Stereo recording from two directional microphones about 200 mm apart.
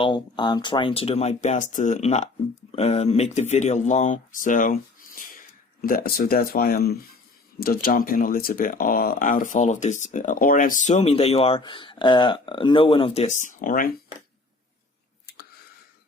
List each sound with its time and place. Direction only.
0.0 s speech: 25° left (ahead or behind); by 13.9 s 45° left (ahead or behind)